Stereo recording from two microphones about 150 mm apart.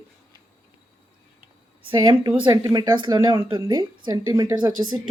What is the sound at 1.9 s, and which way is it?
Speech, 30° right (ahead or behind).